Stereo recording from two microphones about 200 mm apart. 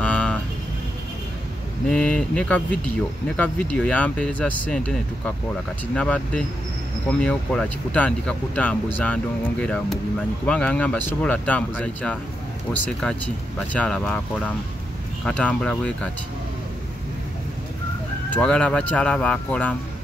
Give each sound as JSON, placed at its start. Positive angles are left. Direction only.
{"t": 0.0, "sound": "a sound", "side_deg": 5}
{"t": 1.9, "sound": "speech", "side_deg": 5}
{"t": 13.6, "sound": "speech", "side_deg": 5}
{"t": 18.3, "sound": "speech", "side_deg": 5}